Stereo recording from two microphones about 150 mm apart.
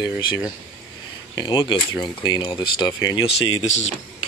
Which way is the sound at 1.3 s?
30° left (ahead or behind).